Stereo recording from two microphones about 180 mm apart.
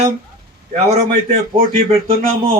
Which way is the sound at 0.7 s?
40° right (ahead or behind).